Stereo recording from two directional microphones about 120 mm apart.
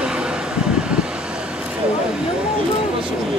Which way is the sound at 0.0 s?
10° right (ahead or behind).